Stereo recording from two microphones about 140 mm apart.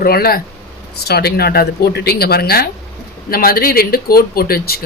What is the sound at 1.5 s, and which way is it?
Speech, 90° left.